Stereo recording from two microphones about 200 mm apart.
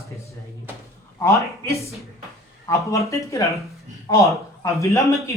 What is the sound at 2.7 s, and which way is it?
Speech, 15° left (ahead or behind).